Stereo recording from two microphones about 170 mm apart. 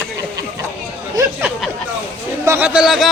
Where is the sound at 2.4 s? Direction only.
10° right (ahead or behind).